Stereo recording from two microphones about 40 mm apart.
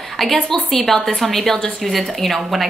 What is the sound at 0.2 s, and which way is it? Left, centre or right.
A woman's voice, centre.